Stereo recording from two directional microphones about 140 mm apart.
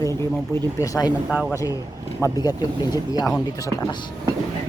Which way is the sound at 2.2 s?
30° left (ahead or behind).